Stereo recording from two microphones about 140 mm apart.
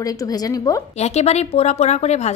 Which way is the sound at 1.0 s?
50° left (ahead or behind).